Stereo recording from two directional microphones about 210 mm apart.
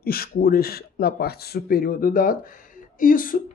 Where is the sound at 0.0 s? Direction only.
45° left (ahead or behind).